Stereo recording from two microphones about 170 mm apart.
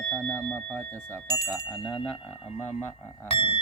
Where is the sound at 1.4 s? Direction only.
5° right (ahead or behind).